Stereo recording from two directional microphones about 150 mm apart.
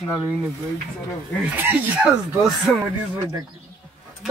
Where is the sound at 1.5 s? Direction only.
15° right (ahead or behind).